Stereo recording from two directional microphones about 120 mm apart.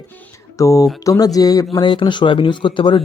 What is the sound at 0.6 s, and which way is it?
A man's voice, 25° left (ahead or behind).